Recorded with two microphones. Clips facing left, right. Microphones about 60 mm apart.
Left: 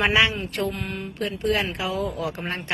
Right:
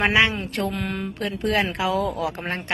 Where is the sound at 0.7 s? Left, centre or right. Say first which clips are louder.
Right 3 dB; right.